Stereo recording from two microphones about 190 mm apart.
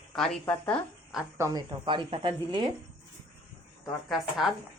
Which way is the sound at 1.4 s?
20° right (ahead or behind).